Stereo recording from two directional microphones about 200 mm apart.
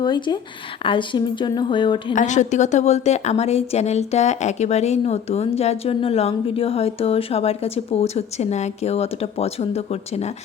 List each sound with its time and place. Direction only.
0.0 s speech: 20° left (ahead or behind)
2.1 s a woman's voice: 35° left (ahead or behind)